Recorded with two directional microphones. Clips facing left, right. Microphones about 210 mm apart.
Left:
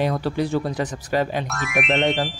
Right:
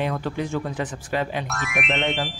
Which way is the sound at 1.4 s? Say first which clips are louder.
Left 3 dB; centre (ahead or behind).